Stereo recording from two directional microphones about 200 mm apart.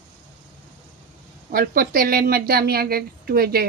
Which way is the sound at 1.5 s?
45° right (ahead or behind).